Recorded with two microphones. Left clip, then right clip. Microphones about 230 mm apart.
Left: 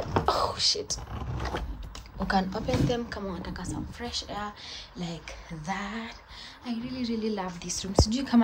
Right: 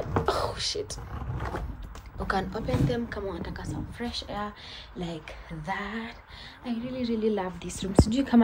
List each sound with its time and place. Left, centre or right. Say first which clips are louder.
0.2 s whispering: left 3 dB; centre
1.1 s vehicle: left 1 dB; left
2.2 s a woman's voice: left 1 dB; centre